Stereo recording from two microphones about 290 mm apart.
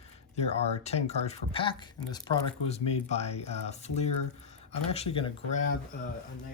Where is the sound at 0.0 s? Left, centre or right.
Left.